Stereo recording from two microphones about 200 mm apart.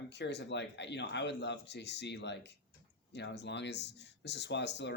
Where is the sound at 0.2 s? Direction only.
60° left (ahead or behind).